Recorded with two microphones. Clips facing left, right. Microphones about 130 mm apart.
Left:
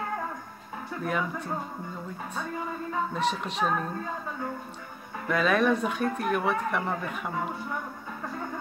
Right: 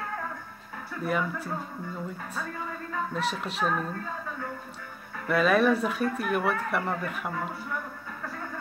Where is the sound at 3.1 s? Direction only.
5° right (ahead or behind).